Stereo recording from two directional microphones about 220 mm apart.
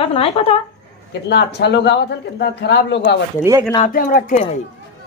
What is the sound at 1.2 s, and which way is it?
Speech, 50° left (ahead or behind).